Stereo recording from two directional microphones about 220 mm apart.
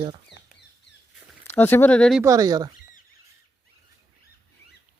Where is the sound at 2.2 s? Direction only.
15° right (ahead or behind).